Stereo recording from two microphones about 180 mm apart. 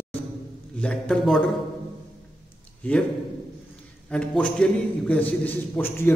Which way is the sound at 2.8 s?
10° left (ahead or behind).